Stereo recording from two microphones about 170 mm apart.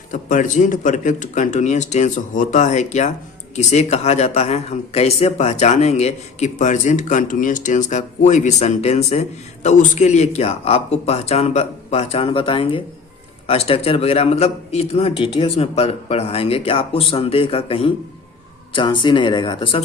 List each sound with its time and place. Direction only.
0.1 s speech: 50° left (ahead or behind); by 19.8 s 30° left (ahead or behind)